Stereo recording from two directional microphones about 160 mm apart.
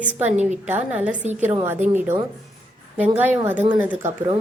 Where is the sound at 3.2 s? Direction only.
10° right (ahead or behind).